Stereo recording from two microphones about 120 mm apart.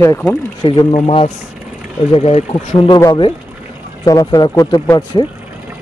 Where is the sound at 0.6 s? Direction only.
45° left (ahead or behind).